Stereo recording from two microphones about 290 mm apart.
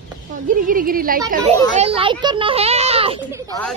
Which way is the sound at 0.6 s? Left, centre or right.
Right.